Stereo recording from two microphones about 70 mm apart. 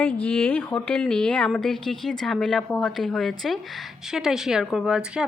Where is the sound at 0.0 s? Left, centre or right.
Left.